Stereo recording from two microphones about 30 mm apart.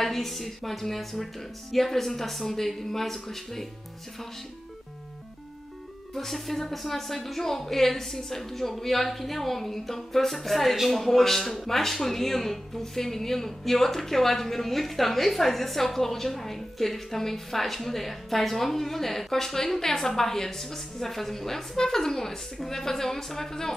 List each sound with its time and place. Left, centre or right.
0.0 s speech: centre
6.1 s speech: centre